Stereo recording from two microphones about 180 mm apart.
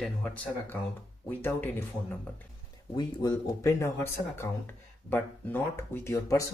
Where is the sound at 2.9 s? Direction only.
20° left (ahead or behind).